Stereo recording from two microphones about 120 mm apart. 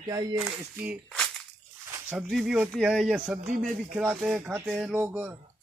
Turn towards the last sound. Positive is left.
turn(degrees=-15)  # may be behind; listen again after turning